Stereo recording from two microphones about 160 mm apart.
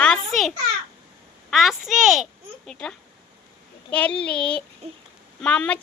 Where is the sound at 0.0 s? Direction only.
5° left (ahead or behind).